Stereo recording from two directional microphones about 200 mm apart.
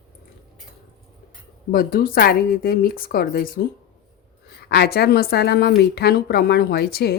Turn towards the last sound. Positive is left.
turn(degrees=55)  # may be behind; listen again after turning